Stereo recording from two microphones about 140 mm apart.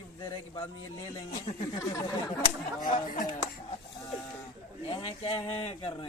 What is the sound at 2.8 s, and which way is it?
Speech, 80° left.